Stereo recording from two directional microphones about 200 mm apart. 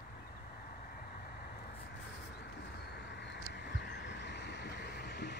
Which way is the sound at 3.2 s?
60° left (ahead or behind).